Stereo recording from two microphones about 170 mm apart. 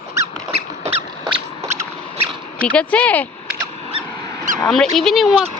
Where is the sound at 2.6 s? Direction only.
10° left (ahead or behind).